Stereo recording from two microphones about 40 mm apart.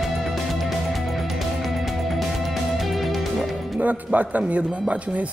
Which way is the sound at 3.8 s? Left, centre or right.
Right.